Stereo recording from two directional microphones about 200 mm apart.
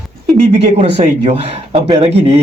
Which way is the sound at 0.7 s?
30° right (ahead or behind).